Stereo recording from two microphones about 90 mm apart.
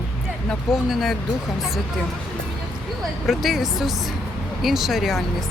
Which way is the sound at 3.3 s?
Centre (ahead or behind).